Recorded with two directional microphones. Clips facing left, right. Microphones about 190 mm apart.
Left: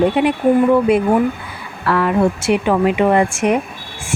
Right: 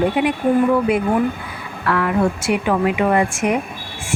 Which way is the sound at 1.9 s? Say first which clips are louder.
Left 3 dB; 30° left (ahead or behind).